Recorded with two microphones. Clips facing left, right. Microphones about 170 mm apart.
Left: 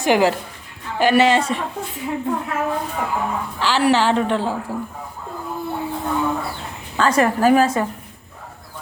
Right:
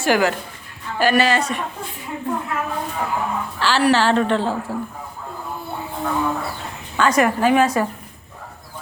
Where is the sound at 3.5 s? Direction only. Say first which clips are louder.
Even; 15° left (ahead or behind).